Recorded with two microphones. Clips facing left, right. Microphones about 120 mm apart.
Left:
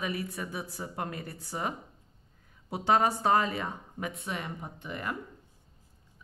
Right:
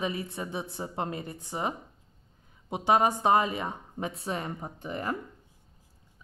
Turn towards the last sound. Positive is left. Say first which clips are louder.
# right 4 dB
turn(degrees=-35)  # may be behind; listen again after turning